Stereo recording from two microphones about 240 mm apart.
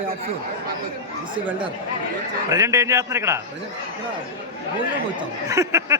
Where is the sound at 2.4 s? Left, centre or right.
Centre.